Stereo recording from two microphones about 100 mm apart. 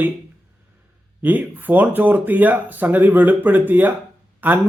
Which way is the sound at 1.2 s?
15° right (ahead or behind).